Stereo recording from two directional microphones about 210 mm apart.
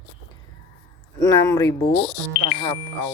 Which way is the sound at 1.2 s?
15° left (ahead or behind).